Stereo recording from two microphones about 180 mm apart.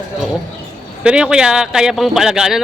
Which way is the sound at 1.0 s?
5° right (ahead or behind).